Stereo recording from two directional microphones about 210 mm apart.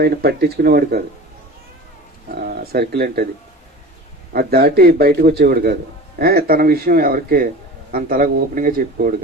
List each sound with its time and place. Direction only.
0.0 s a man's voice: 50° right (ahead or behind)
2.3 s speech: 45° right (ahead or behind)
4.3 s a man's voice: 45° right (ahead or behind)